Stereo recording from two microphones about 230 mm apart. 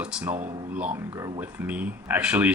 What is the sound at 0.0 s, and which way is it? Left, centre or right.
Speech, centre.